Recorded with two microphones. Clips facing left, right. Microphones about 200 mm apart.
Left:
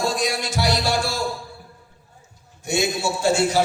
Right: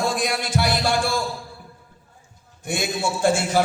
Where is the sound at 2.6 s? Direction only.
50° right (ahead or behind).